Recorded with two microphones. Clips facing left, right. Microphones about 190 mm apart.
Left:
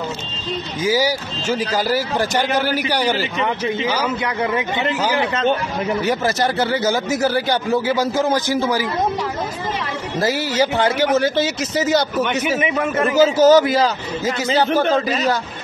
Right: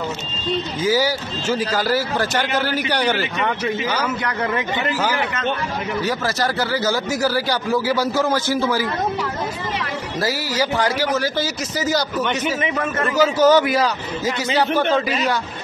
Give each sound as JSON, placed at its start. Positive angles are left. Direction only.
{"t": 0.8, "sound": "a man's voice", "side_deg": 15}
{"t": 6.0, "sound": "speech", "side_deg": 20}
{"t": 10.2, "sound": "speech", "side_deg": 25}
{"t": 12.5, "sound": "speech", "side_deg": 15}
{"t": 13.4, "sound": "a man's voice", "side_deg": 40}
{"t": 13.7, "sound": "a man's voice", "side_deg": 25}